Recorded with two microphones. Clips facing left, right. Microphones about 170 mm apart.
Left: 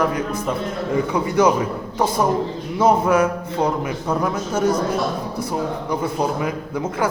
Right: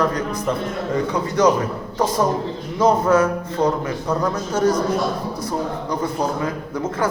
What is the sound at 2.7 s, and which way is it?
A man's voice, 10° left (ahead or behind).